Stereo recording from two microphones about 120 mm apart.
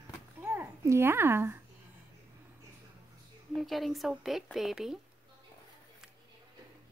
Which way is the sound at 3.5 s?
Centre (ahead or behind).